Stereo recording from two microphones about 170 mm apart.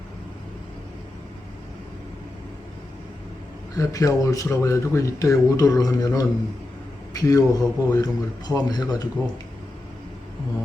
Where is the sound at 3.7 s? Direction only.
20° left (ahead or behind).